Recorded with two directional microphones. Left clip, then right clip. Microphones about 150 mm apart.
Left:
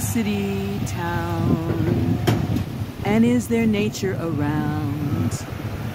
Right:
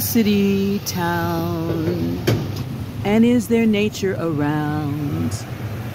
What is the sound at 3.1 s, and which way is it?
Speech, 35° right (ahead or behind).